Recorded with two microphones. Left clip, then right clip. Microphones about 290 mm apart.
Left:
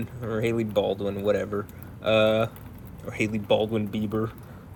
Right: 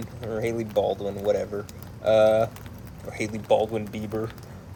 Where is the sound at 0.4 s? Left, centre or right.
Left.